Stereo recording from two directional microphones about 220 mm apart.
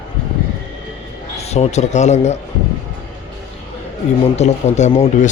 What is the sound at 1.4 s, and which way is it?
Speech, 30° left (ahead or behind).